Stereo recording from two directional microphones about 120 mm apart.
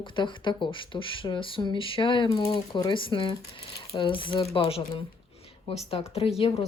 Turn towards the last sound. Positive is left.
turn(degrees=50)  # may be behind; listen again after turning